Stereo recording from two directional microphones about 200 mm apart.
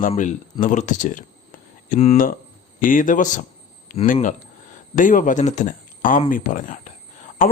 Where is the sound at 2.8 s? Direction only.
40° left (ahead or behind).